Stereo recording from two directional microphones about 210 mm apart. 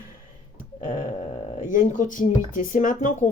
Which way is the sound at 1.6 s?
35° left (ahead or behind).